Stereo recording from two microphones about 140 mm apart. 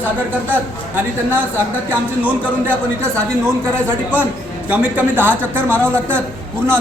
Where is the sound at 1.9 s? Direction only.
10° right (ahead or behind).